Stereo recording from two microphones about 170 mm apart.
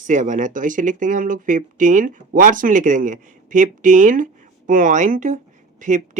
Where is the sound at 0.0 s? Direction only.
45° right (ahead or behind).